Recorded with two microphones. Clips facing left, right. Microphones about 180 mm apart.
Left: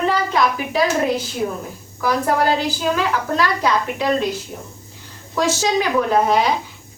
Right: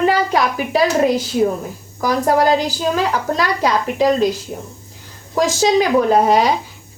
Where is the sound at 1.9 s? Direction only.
40° right (ahead or behind).